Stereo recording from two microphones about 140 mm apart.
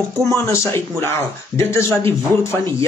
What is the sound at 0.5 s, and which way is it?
Speech, 20° left (ahead or behind).